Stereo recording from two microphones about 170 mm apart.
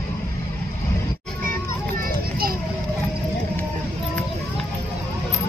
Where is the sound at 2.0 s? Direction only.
60° right (ahead or behind).